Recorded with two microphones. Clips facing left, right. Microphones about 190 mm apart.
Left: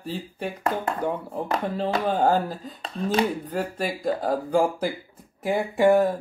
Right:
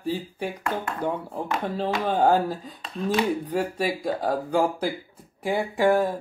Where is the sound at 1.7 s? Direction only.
5° right (ahead or behind).